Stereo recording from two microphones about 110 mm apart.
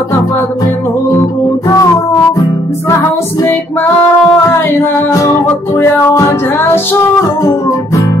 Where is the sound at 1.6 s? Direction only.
35° left (ahead or behind).